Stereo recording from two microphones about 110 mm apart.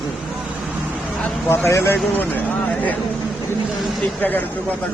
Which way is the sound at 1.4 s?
20° left (ahead or behind).